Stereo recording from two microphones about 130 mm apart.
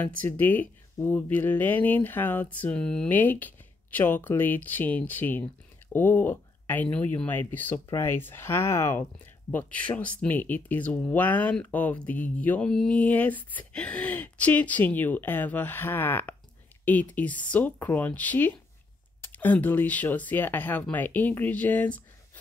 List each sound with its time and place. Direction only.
0.0 s speech: 10° left (ahead or behind)